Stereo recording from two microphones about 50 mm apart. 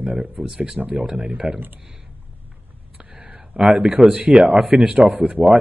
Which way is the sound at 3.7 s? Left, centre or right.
Right.